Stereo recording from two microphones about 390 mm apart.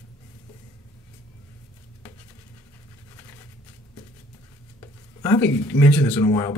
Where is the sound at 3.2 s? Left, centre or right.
Centre.